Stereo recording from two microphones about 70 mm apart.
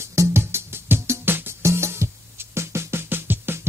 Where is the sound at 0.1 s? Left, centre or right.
Right.